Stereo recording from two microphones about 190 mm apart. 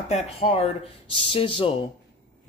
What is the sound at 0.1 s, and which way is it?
Speech, 30° left (ahead or behind).